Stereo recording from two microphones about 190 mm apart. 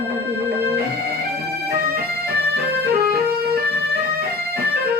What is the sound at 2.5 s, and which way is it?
Music, 55° right (ahead or behind).